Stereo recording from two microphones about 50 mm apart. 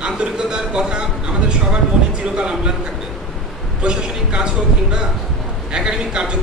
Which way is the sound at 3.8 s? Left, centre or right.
Centre.